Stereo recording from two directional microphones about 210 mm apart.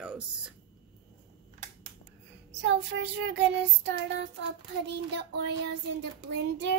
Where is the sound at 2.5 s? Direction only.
55° right (ahead or behind).